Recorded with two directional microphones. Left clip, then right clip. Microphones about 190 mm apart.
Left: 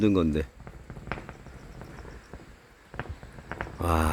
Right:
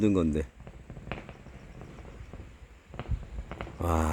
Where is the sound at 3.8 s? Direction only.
10° right (ahead or behind).